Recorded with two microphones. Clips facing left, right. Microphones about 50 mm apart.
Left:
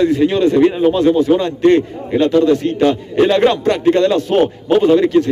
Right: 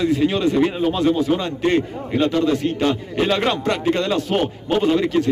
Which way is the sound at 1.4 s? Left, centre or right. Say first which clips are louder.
Left 7 dB; centre.